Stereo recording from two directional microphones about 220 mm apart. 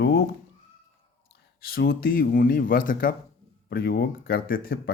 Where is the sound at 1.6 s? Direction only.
45° left (ahead or behind).